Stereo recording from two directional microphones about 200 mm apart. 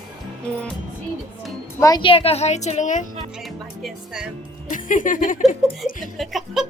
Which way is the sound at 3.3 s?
Centre (ahead or behind).